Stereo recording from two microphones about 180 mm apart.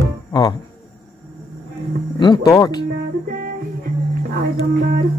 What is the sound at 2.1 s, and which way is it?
Speech, 25° left (ahead or behind).